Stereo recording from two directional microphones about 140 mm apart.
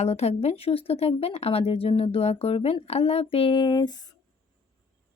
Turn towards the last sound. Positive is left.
turn(degrees=30)  # may be behind; listen again after turning